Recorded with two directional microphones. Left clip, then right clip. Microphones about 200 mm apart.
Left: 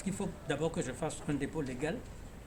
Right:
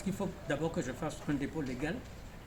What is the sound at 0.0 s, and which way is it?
Speech, 20° left (ahead or behind).